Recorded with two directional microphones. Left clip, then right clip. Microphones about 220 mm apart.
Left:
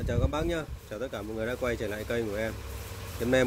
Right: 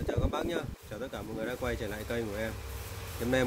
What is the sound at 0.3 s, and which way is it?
Speech, 5° left (ahead or behind).